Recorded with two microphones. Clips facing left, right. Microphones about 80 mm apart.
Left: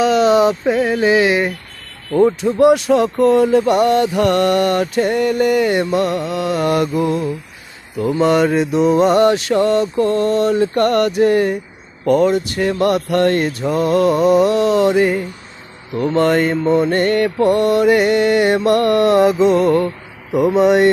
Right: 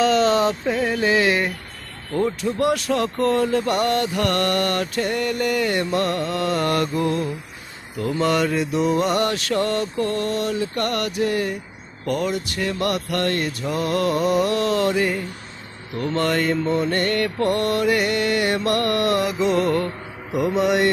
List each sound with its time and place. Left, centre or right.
0.0 s a sound: centre
0.9 s mantra: centre
2.1 s speech: left